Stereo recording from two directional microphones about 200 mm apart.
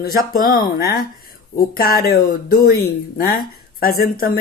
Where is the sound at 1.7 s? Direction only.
50° left (ahead or behind).